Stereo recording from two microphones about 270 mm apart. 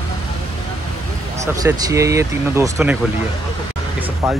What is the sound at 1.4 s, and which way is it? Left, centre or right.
A man's voice, centre.